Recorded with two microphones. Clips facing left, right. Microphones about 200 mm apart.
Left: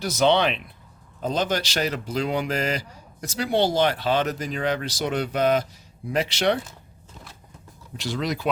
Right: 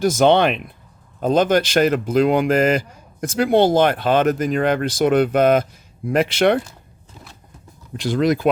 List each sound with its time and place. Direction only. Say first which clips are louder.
0.0 s speech: right 6 dB; 50° right (ahead or behind)
7.9 s speech: right 9 dB; 50° right (ahead or behind)